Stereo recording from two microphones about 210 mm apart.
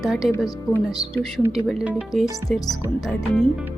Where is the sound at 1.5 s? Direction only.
Centre (ahead or behind).